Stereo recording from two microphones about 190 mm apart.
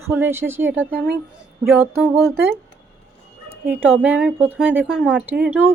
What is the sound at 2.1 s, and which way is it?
Speech, centre (ahead or behind).